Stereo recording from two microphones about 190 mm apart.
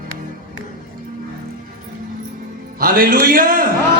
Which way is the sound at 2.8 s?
50° right (ahead or behind).